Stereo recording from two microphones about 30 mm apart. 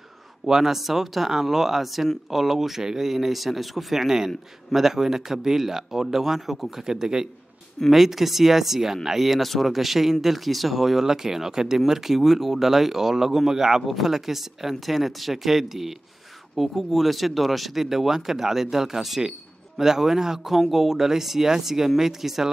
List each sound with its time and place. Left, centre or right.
0.5 s speech: centre
0.7 s speech: centre
7.9 s speech: centre
9.4 s speech: centre